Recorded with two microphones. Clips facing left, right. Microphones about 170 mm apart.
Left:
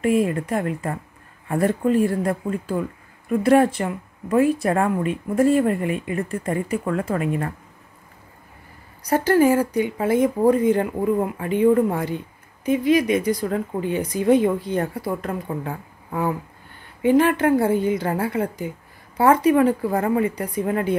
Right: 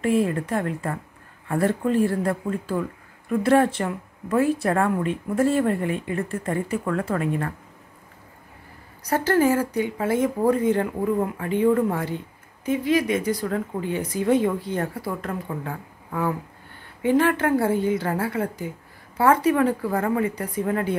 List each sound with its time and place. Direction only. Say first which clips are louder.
0.0 s speech: left 2 dB; 10° left (ahead or behind)
9.0 s speech: left 3 dB; 15° left (ahead or behind)